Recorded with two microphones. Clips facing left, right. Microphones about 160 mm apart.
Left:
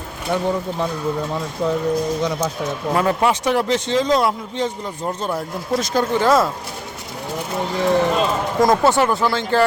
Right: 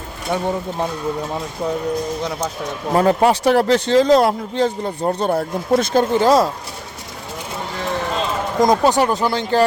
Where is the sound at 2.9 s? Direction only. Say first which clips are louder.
Right 4 dB; 35° right (ahead or behind).